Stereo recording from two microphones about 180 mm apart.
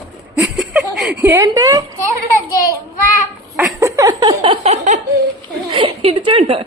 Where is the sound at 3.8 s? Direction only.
20° right (ahead or behind); by 5.0 s 40° right (ahead or behind).